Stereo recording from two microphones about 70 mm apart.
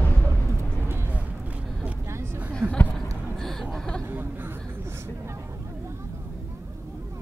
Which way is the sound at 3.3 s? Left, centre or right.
Centre.